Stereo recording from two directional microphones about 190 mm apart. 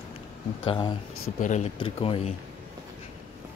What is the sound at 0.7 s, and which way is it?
Speech, 25° left (ahead or behind).